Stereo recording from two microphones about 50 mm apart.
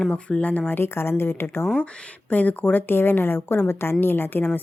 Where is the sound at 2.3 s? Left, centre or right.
Left.